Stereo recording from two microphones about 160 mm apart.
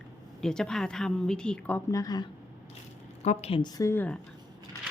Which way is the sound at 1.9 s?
25° left (ahead or behind).